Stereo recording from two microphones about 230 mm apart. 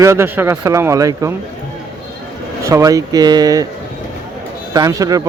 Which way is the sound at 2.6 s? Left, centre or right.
Centre.